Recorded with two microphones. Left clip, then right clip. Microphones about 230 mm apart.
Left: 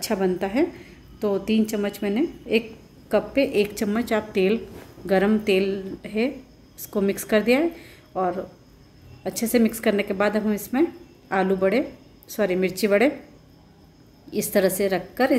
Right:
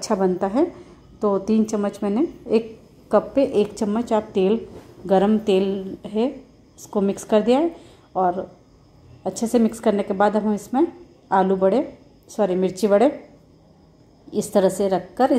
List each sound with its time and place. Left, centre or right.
0.0 s a woman's voice: centre
14.3 s a woman's voice: centre